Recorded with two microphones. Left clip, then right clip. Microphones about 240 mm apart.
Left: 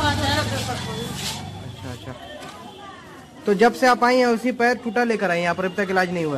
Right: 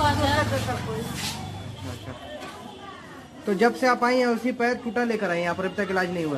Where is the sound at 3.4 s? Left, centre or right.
Left.